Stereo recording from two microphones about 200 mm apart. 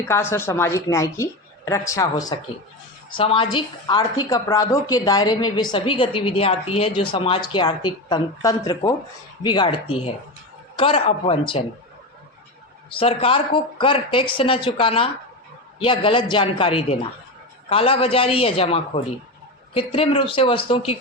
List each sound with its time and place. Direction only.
0.1 s a woman's voice: 10° left (ahead or behind); by 11.6 s 30° left (ahead or behind)
13.0 s a woman's voice: 30° left (ahead or behind)